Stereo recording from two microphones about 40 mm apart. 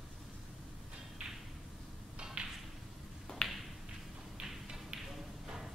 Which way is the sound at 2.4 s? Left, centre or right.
Right.